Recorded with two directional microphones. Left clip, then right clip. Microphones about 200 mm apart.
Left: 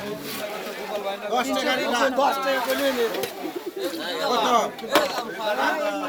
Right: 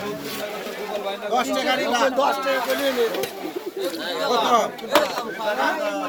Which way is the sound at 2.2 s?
25° left (ahead or behind).